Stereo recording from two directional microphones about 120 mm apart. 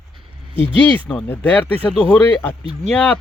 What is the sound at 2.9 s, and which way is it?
Speech, 10° left (ahead or behind).